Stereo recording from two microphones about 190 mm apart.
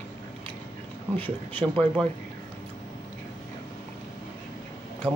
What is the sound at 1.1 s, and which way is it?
Speech, 10° left (ahead or behind).